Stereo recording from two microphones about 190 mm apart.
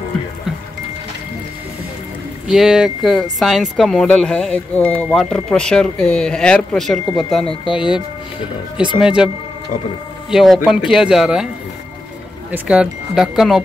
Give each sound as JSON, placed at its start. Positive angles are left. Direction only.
{"t": 2.4, "sound": "speech", "side_deg": -5}
{"t": 9.0, "sound": "speech", "side_deg": -5}
{"t": 10.3, "sound": "speech", "side_deg": 0}
{"t": 12.4, "sound": "speech", "side_deg": -5}